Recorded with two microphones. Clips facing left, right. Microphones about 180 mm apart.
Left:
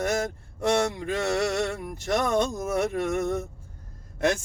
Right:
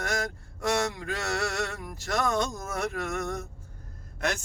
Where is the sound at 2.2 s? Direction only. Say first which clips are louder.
Left 3 dB; 15° left (ahead or behind).